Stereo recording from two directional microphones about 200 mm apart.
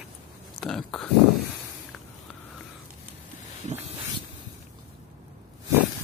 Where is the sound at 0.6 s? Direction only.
Centre (ahead or behind).